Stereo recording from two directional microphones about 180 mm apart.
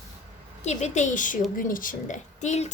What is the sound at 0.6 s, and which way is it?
A woman's voice, 40° left (ahead or behind).